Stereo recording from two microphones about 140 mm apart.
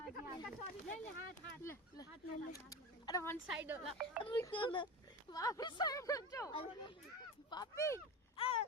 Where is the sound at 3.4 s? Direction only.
10° right (ahead or behind).